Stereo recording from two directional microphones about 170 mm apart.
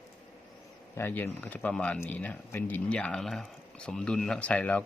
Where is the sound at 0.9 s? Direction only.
10° left (ahead or behind).